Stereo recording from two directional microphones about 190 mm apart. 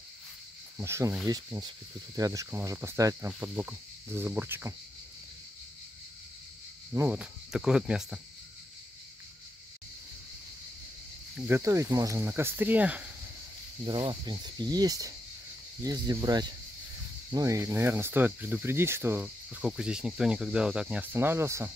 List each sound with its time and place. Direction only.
0.7 s speech: 15° right (ahead or behind)
6.9 s speech: 10° right (ahead or behind)
11.3 s speech: 10° right (ahead or behind)
13.8 s speech: 25° right (ahead or behind)